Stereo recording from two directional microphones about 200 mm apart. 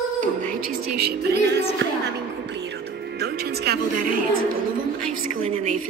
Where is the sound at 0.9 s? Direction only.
55° right (ahead or behind).